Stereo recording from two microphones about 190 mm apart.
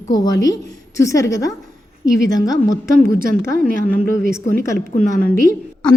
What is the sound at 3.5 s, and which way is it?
Speech, 45° right (ahead or behind).